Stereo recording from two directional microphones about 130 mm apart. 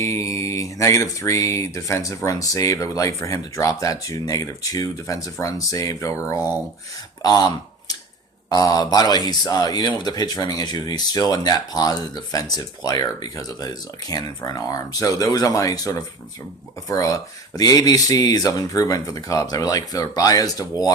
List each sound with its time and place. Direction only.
0.0 s speech: 25° left (ahead or behind)
8.4 s speech: 30° left (ahead or behind)